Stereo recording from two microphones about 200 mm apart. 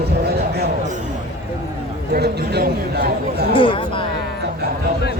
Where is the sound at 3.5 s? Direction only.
25° left (ahead or behind).